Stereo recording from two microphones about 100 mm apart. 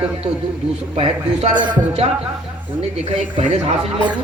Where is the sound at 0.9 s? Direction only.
90° right.